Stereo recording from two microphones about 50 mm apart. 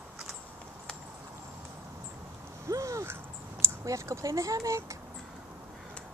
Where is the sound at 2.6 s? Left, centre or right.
Right.